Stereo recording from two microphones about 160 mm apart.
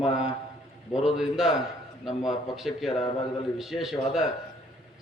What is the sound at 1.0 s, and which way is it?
Speech, centre (ahead or behind).